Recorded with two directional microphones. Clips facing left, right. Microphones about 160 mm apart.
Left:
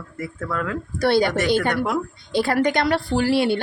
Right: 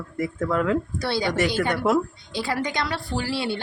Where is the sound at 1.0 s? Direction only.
55° left (ahead or behind).